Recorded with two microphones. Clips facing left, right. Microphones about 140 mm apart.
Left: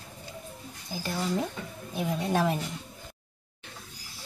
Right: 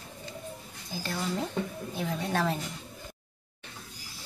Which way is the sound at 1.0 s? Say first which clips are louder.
Left 2 dB; 10° left (ahead or behind).